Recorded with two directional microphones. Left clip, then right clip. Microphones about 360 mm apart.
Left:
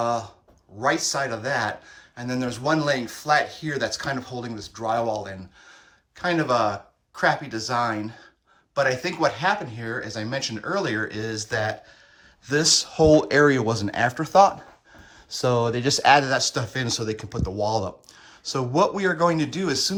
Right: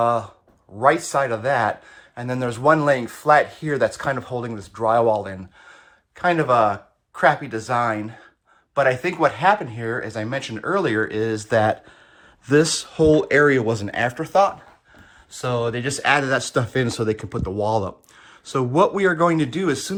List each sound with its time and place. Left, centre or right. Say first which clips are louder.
0.0 s speech: right 5 dB; centre